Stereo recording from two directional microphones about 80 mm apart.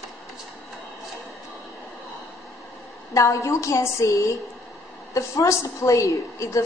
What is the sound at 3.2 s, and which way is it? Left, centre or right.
A woman's voice, left.